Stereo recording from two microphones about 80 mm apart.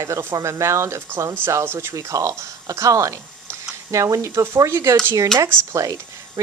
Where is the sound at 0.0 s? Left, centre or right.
Right.